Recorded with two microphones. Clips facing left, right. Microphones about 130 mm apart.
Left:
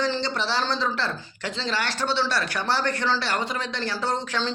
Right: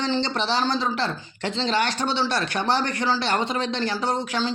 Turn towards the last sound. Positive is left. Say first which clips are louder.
# right 2 dB
turn(degrees=-10)  # may be behind; listen again after turning